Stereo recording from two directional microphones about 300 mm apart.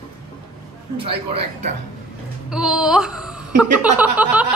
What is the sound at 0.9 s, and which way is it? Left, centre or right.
Speech, centre.